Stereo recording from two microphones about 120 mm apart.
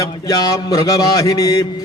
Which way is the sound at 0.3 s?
30° left (ahead or behind).